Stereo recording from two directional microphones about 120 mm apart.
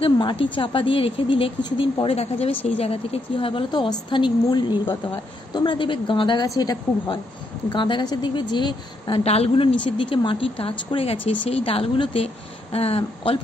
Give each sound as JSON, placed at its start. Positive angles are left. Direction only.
{"t": 0.0, "sound": "a woman's voice", "side_deg": 45}
{"t": 9.2, "sound": "a woman's voice", "side_deg": 55}
{"t": 9.8, "sound": "speech", "side_deg": 45}